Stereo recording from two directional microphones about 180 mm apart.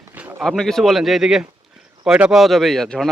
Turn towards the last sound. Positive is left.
turn(degrees=0)  # may be behind; listen again after turning